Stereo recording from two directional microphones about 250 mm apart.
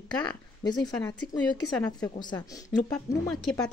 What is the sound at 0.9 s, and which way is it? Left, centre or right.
Speech, centre.